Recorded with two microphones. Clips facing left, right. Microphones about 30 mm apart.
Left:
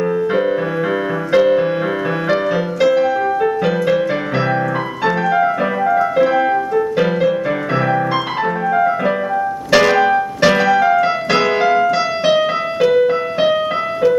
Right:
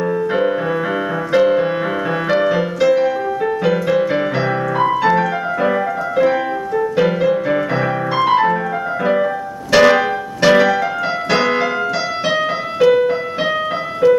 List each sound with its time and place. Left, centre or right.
0.0 s music: centre
9.7 s piano: centre
10.1 s keyboard: centre